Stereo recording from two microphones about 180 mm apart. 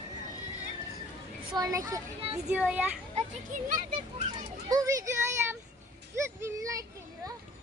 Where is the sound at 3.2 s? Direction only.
45° right (ahead or behind).